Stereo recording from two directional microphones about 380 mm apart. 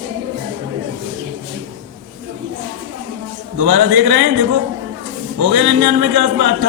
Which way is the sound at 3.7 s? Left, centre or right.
Right.